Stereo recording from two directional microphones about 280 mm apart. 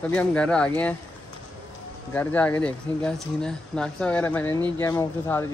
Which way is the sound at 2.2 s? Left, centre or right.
Centre.